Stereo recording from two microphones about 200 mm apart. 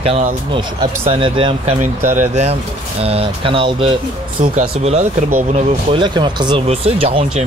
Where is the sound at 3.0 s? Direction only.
30° right (ahead or behind).